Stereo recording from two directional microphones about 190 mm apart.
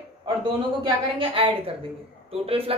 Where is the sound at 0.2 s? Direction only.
25° right (ahead or behind).